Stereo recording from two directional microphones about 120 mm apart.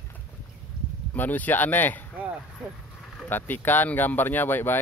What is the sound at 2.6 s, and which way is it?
Speech, 5° right (ahead or behind).